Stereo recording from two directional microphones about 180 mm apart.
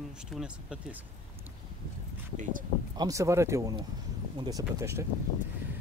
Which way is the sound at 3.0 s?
15° right (ahead or behind).